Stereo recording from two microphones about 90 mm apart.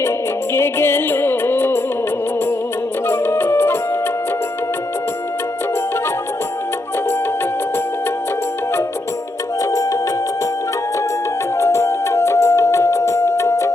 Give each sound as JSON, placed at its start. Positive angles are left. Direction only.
{"t": 0.5, "sound": "music", "side_deg": 25}
{"t": 3.1, "sound": "music", "side_deg": 25}
{"t": 11.5, "sound": "music", "side_deg": 30}